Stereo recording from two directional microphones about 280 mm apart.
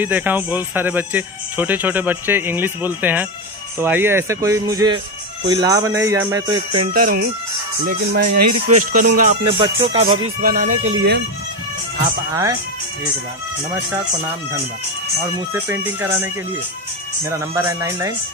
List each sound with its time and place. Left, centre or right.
0.0 s speech: centre
10.0 s speech: right
15.5 s speech: centre
17.3 s speech: centre